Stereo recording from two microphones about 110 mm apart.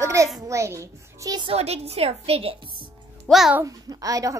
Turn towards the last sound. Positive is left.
turn(degrees=-30)  # may be behind; listen again after turning